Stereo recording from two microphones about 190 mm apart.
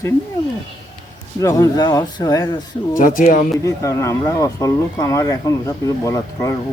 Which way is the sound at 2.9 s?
45° left (ahead or behind).